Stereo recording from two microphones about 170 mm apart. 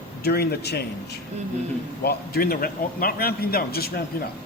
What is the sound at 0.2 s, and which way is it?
Speech, 70° left (ahead or behind).